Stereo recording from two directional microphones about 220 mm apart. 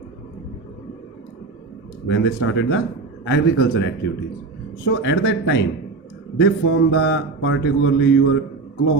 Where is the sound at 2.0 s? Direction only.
55° left (ahead or behind).